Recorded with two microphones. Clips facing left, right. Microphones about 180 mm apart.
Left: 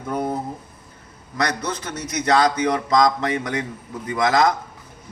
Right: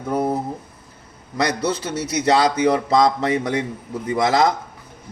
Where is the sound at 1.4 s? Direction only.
10° right (ahead or behind).